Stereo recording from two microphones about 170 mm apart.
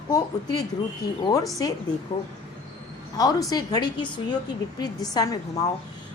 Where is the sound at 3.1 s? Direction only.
20° left (ahead or behind).